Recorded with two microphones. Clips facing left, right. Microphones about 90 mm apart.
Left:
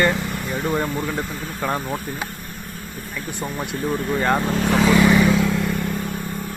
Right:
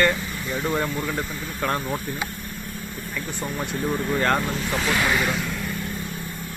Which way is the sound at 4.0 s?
Centre (ahead or behind).